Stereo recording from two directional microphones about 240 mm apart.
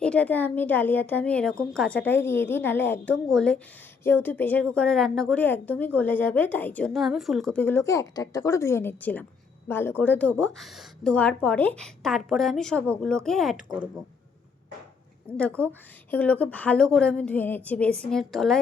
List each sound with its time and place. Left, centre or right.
0.0 s a woman's voice: centre
15.4 s a woman's voice: centre